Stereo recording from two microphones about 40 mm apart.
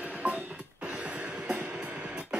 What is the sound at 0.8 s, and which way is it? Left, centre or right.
Music, right.